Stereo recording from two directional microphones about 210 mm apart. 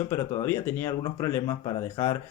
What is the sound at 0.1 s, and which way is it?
Speech, 10° left (ahead or behind).